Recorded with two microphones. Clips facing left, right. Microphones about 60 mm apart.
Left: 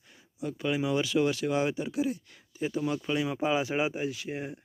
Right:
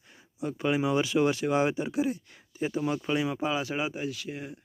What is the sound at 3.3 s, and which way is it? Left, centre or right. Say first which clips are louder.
Speech: left 2 dB; centre.